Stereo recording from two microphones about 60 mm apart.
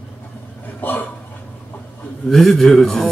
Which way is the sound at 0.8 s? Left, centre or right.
Left.